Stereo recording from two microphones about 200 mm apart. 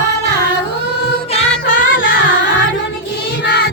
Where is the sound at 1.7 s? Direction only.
65° left (ahead or behind).